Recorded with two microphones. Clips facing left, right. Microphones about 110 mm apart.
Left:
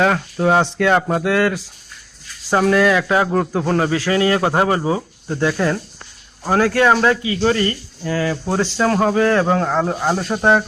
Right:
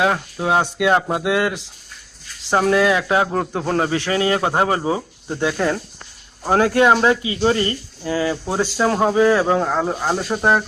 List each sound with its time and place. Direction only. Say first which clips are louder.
0.0 s speech: left 3 dB; 10° right (ahead or behind)
5.5 s speech: left 1 dB; 30° right (ahead or behind); by 10.6 s centre (ahead or behind)